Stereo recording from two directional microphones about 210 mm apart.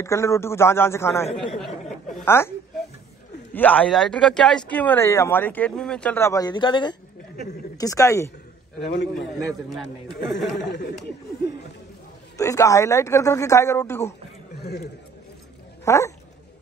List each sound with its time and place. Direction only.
0.0 s speech: 15° left (ahead or behind)
3.5 s speech: 5° left (ahead or behind)
8.8 s speech: 55° left (ahead or behind)
10.6 s speech: 50° left (ahead or behind)
12.4 s speech: 15° left (ahead or behind)
14.6 s a man's voice: 50° left (ahead or behind)
15.8 s speech: 15° left (ahead or behind)